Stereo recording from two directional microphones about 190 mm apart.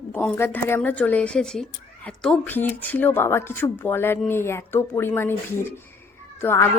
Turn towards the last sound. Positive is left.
turn(degrees=15)  # may be behind; listen again after turning